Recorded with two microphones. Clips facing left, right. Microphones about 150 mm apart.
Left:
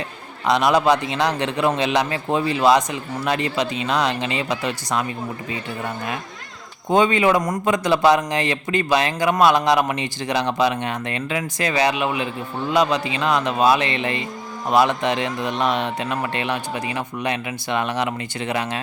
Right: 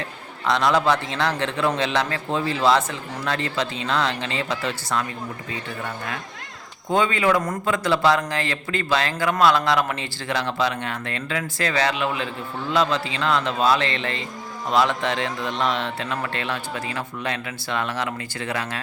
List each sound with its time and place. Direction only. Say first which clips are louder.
0.4 s a man's voice: left 3 dB; 15° left (ahead or behind)
6.9 s a man's voice: left 3 dB; 20° left (ahead or behind)